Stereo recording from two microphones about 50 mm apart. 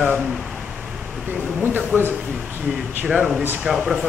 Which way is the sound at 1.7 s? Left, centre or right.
Right.